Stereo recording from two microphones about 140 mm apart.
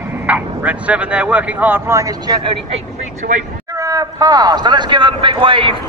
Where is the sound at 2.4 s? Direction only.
40° right (ahead or behind).